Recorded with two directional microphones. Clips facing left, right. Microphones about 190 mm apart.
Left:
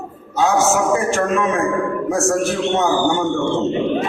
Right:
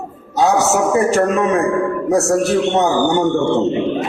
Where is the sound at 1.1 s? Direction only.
35° right (ahead or behind).